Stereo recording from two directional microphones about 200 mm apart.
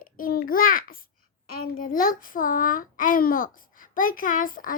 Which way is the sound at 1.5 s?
45° left (ahead or behind).